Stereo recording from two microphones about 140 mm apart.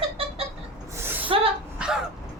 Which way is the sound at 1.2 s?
40° right (ahead or behind).